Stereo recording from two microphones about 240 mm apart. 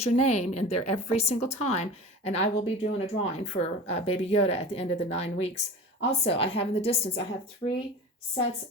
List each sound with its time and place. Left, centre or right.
0.0 s a woman's voice: left